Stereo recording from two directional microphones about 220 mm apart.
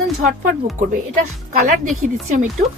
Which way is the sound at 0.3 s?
35° right (ahead or behind).